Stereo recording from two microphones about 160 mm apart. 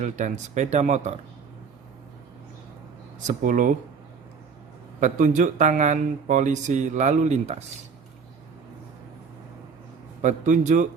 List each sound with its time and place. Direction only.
0.0 s speech: 50° right (ahead or behind)
3.2 s speech: 50° right (ahead or behind)
4.9 s speech: 50° right (ahead or behind)
10.2 s speech: 50° right (ahead or behind)